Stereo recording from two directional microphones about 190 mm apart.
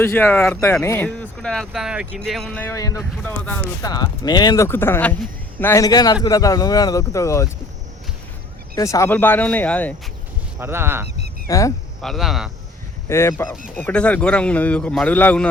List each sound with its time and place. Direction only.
0.0 s speech: 10° left (ahead or behind)
3.8 s a man's voice: 20° left (ahead or behind)
8.7 s speech: 15° left (ahead or behind)
10.6 s speech: 10° right (ahead or behind)
11.4 s speech: 15° left (ahead or behind)
12.0 s speech: centre (ahead or behind)
13.1 s speech: 15° left (ahead or behind)